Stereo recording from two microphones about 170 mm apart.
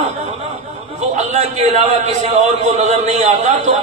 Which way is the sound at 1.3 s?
40° right (ahead or behind).